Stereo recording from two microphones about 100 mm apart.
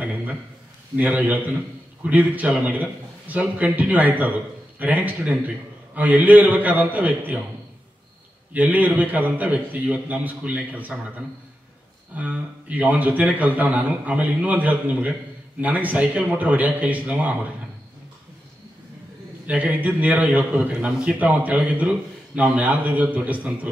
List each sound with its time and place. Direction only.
0.0 s a sound: 15° right (ahead or behind)
0.9 s a man's voice: 15° right (ahead or behind)
8.5 s a man's voice: 15° right (ahead or behind)
19.4 s a man's voice: 15° right (ahead or behind)